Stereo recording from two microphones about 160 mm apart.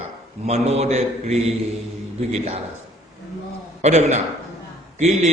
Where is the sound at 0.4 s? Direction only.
40° right (ahead or behind).